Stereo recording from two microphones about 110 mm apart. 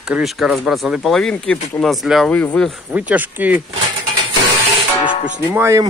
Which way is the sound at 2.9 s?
15° right (ahead or behind).